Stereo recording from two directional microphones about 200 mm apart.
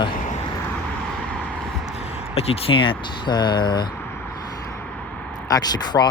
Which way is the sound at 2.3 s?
30° left (ahead or behind).